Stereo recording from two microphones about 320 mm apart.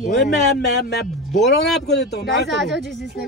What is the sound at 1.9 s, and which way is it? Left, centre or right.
Speech, left.